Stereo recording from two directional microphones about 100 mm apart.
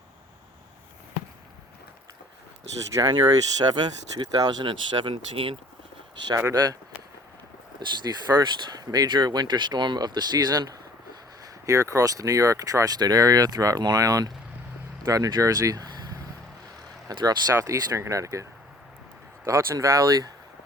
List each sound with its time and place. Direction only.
2.9 s speech: 45° right (ahead or behind)
4.6 s speech: 55° right (ahead or behind)
6.1 s speech: 45° right (ahead or behind)
7.8 s speech: 45° right (ahead or behind)
11.6 s speech: 30° right (ahead or behind)
17.1 s speech: 45° right (ahead or behind)
17.6 s speech: 30° right (ahead or behind)
19.5 s speech: 30° right (ahead or behind)